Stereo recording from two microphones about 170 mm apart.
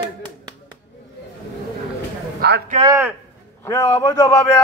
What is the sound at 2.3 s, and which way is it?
Speech, 75° right (ahead or behind).